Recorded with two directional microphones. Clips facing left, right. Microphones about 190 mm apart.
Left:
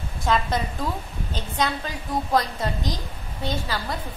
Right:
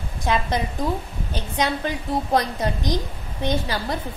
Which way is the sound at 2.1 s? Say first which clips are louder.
Right 1 dB; 25° right (ahead or behind).